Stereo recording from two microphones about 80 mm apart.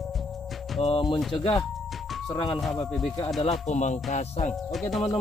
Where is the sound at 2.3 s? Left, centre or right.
Left.